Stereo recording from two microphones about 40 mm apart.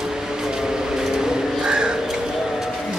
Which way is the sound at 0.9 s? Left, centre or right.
Centre.